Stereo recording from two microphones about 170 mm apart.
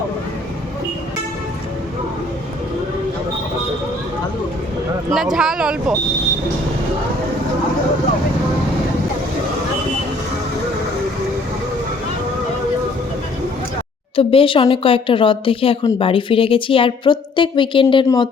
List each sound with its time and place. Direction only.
5.1 s speech: centre (ahead or behind)
14.2 s speech: 35° left (ahead or behind)